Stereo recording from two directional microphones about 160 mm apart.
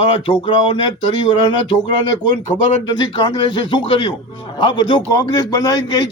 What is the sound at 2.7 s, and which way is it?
A man's voice, 30° left (ahead or behind).